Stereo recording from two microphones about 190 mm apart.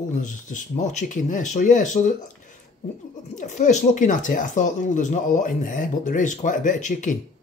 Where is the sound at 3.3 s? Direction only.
40° left (ahead or behind).